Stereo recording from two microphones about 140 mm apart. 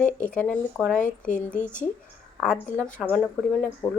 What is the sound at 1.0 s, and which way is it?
Speech, 65° left (ahead or behind).